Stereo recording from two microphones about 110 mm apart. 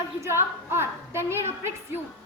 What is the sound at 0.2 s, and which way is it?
A woman's voice, 25° right (ahead or behind).